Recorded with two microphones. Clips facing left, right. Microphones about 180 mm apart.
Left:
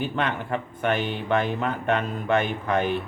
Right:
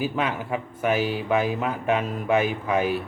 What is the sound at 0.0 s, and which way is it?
Speech, 5° right (ahead or behind).